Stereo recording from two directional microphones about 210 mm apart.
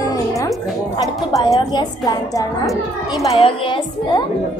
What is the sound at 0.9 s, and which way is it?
A woman's voice, 20° left (ahead or behind).